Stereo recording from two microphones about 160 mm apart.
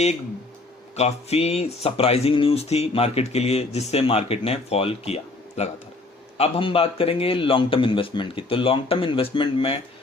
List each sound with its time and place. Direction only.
0.9 s speech: 40° left (ahead or behind)